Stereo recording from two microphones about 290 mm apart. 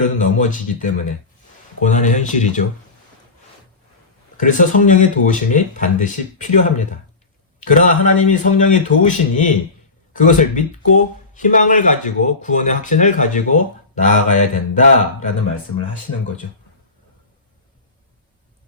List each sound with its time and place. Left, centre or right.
0.0 s speech: left
4.4 s speech: left